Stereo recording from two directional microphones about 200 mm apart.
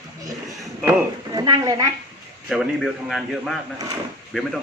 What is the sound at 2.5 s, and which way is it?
A man's voice, centre (ahead or behind).